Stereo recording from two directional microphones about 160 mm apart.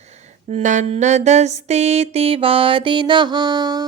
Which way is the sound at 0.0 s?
45° right (ahead or behind).